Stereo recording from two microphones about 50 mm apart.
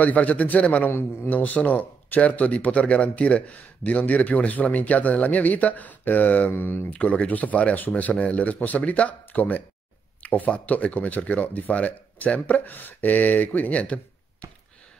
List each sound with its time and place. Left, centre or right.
0.0 s speech: left
0.8 s a man's voice: left
1.3 s speech: left
6.5 s a man's voice: left
6.9 s speech: left